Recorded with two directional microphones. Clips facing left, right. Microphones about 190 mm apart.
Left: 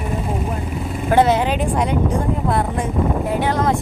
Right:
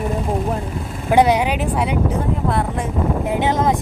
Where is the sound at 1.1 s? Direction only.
15° right (ahead or behind).